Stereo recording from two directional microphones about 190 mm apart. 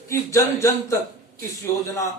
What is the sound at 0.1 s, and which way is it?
A man's voice, 15° left (ahead or behind).